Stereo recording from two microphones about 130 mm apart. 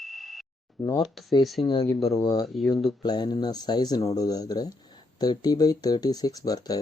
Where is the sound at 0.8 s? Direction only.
25° left (ahead or behind).